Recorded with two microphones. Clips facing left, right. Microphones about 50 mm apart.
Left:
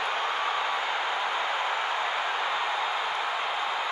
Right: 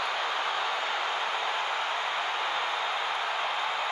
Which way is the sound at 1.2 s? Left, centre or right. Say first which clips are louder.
Left 2 dB; left.